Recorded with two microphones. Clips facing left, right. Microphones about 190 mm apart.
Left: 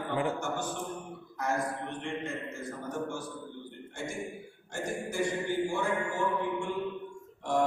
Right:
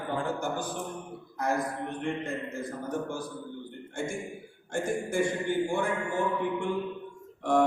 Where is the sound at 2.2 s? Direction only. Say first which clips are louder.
Right 3 dB; 35° right (ahead or behind).